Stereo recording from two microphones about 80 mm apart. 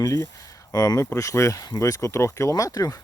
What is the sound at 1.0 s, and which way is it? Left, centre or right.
Speech, left.